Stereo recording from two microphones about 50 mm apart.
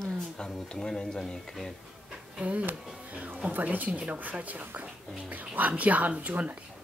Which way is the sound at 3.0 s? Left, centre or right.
Right.